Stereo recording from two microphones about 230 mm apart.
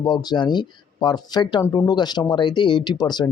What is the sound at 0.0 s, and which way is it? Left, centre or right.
Speech, centre.